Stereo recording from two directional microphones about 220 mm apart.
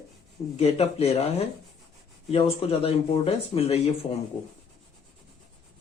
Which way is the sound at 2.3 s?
25° left (ahead or behind).